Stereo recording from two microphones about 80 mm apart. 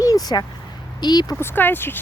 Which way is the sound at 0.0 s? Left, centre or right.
Left.